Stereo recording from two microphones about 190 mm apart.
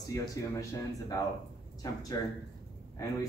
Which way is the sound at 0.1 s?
20° left (ahead or behind).